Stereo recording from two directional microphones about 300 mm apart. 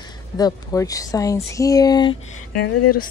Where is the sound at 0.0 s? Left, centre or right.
Centre.